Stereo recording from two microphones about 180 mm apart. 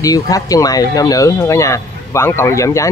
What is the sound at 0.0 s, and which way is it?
Speech, 20° left (ahead or behind).